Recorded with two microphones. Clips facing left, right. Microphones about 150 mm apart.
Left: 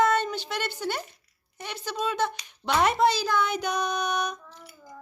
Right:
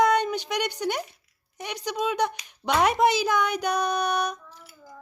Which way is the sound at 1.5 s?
15° right (ahead or behind).